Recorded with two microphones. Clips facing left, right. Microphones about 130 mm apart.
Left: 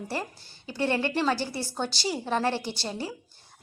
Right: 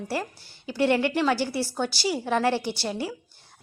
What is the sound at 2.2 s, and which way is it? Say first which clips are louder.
Speech: right 3 dB; 20° left (ahead or behind).